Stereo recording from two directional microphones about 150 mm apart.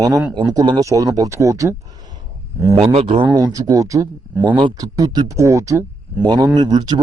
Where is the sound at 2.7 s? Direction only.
45° right (ahead or behind).